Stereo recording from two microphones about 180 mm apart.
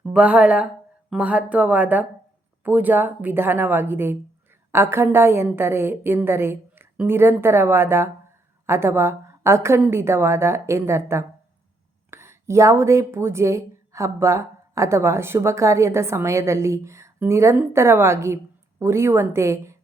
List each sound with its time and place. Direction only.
0.0 s speech: 5° right (ahead or behind)